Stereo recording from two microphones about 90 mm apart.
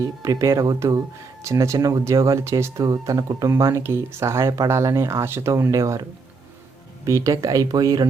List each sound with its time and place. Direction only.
0.0 s speech: 35° right (ahead or behind)
1.5 s speech: 35° right (ahead or behind)